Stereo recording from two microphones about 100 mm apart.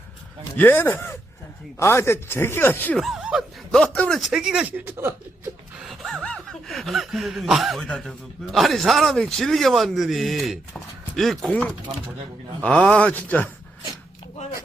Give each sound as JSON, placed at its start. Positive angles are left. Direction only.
{"t": 0.5, "sound": "speech", "side_deg": 20}
{"t": 2.9, "sound": "a sound", "side_deg": 0}
{"t": 3.7, "sound": "speech", "side_deg": 10}
{"t": 4.2, "sound": "speech", "side_deg": -5}
{"t": 4.9, "sound": "speech", "side_deg": -25}
{"t": 5.7, "sound": "gasp", "side_deg": -5}
{"t": 6.2, "sound": "speech", "side_deg": 5}